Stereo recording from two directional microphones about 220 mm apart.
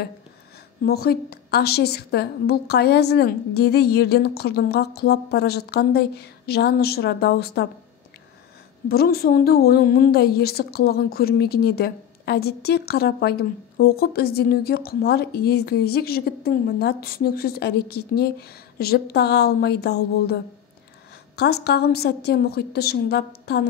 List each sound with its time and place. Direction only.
0.8 s a woman's voice: 45° left (ahead or behind)
8.8 s a woman's voice: 45° left (ahead or behind)
21.4 s a woman's voice: 45° left (ahead or behind)